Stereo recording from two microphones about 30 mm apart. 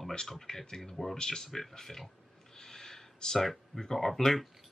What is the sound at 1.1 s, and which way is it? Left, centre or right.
Speech, centre.